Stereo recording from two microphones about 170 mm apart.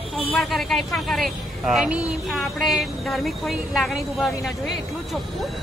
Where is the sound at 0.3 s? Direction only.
Centre (ahead or behind).